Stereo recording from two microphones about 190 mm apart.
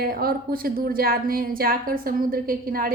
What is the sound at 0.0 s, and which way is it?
A woman's voice, 50° right (ahead or behind).